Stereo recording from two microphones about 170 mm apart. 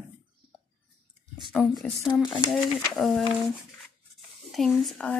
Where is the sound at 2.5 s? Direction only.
Centre (ahead or behind).